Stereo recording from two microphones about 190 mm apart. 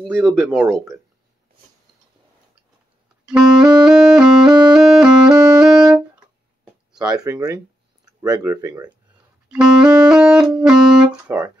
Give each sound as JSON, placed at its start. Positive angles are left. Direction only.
{"t": 0.1, "sound": "speech", "side_deg": 0}
{"t": 3.3, "sound": "music", "side_deg": -5}
{"t": 7.2, "sound": "speech", "side_deg": -20}
{"t": 9.5, "sound": "music", "side_deg": -5}